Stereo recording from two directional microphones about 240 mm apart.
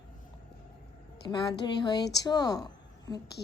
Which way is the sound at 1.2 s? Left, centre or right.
Centre.